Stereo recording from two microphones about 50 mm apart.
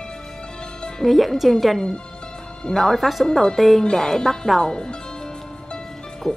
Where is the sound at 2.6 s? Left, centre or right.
Centre.